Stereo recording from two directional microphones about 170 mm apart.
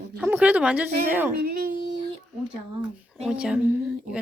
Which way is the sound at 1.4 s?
60° right (ahead or behind).